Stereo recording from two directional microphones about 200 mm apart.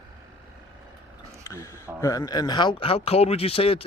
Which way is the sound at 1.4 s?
15° left (ahead or behind).